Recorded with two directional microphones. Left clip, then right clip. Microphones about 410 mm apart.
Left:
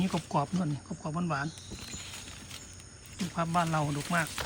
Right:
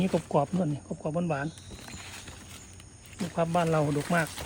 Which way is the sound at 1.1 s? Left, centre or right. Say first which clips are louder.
Right 3 dB; right.